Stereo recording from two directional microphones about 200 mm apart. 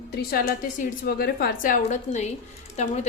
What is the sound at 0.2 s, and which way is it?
A woman's voice, 50° left (ahead or behind).